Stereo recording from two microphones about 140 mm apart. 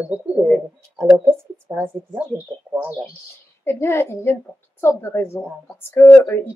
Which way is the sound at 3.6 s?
20° left (ahead or behind).